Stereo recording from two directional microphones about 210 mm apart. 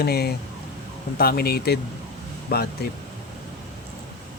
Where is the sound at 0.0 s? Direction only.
50° left (ahead or behind).